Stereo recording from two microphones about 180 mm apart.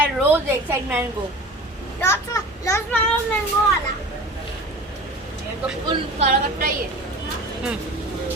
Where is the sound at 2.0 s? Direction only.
15° left (ahead or behind).